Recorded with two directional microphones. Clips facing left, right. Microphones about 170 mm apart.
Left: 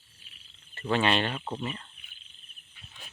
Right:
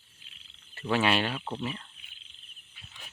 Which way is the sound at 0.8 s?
5° right (ahead or behind).